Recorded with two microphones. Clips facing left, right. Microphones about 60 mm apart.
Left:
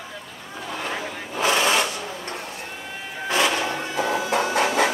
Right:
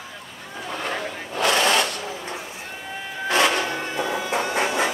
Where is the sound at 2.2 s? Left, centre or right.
Left.